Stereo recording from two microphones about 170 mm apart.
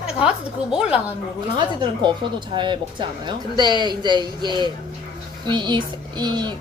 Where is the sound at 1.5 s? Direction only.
25° right (ahead or behind).